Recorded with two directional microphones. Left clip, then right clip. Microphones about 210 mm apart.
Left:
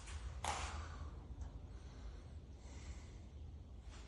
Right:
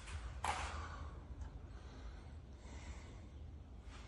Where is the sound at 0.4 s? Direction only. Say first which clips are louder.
Right 2 dB; 5° left (ahead or behind).